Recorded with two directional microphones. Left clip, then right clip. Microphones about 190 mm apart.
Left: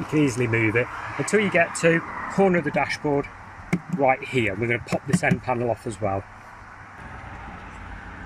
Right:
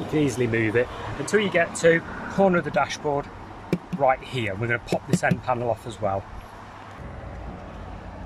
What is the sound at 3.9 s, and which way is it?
Speech, 5° left (ahead or behind).